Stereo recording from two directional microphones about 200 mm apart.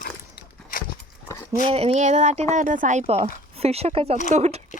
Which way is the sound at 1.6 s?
30° right (ahead or behind).